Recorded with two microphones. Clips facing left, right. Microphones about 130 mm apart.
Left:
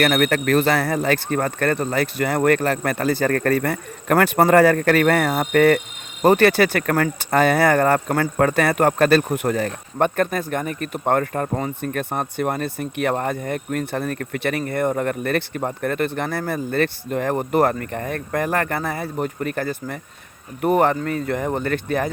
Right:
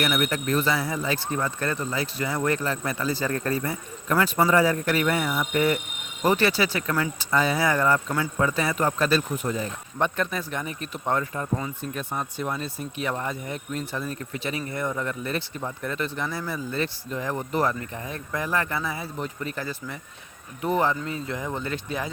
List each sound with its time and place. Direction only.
0.0 s speech: 65° left (ahead or behind)